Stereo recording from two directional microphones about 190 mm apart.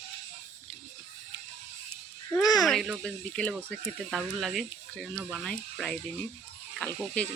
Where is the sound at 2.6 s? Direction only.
Centre (ahead or behind).